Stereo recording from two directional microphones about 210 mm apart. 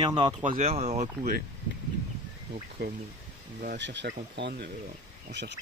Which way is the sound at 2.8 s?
50° right (ahead or behind).